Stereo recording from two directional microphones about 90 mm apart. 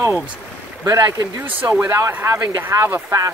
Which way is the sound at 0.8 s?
40° right (ahead or behind).